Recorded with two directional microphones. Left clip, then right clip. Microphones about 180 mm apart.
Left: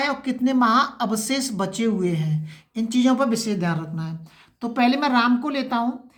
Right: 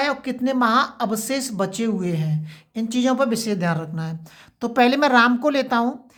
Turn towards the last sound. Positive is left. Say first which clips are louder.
# right 4 dB
turn(degrees=-50)  # may be behind; listen again after turning